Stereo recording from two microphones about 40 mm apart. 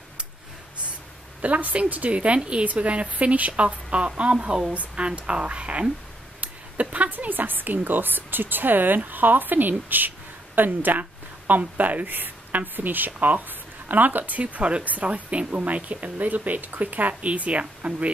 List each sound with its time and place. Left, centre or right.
1.4 s speech: right
6.4 s a sound: right
7.1 s a woman's voice: right
17.2 s speech: right